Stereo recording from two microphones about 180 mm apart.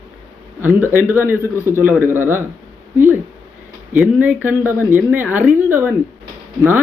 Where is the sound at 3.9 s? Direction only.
10° right (ahead or behind).